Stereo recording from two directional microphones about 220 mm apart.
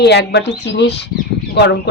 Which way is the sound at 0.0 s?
50° left (ahead or behind).